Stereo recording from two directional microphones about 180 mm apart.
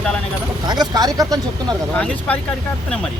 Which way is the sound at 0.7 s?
20° right (ahead or behind).